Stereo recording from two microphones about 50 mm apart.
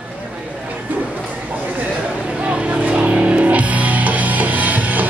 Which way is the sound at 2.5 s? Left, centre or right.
Right.